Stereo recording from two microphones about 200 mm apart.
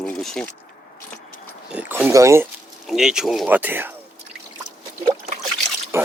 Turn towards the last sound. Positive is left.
turn(degrees=-15)  # may be behind; listen again after turning